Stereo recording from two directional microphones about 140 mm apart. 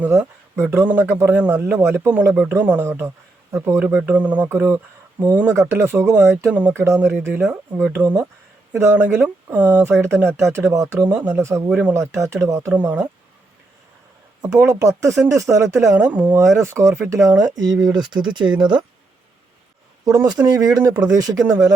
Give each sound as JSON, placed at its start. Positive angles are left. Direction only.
{"t": 0.0, "sound": "a man's voice", "side_deg": -15}
{"t": 4.0, "sound": "a man's voice", "side_deg": -10}
{"t": 11.9, "sound": "speech", "side_deg": -20}
{"t": 14.4, "sound": "speech", "side_deg": -20}
{"t": 20.1, "sound": "speech", "side_deg": -30}